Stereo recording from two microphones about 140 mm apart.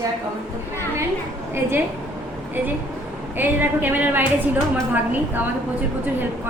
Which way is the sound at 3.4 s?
15° right (ahead or behind).